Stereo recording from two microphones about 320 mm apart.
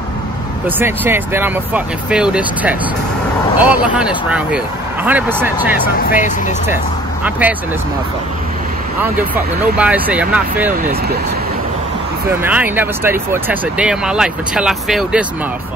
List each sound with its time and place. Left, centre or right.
0.7 s speech: centre
6.0 s speech: left
7.2 s speech: centre
9.3 s speech: centre
12.3 s speech: centre